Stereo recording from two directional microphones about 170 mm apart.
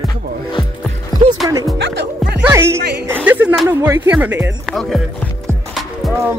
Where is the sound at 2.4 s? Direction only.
15° right (ahead or behind).